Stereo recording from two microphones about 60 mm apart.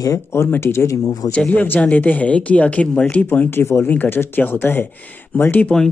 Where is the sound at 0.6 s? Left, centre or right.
Left.